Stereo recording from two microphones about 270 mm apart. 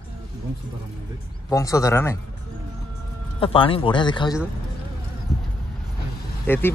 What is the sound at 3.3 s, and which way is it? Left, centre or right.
Speech, centre.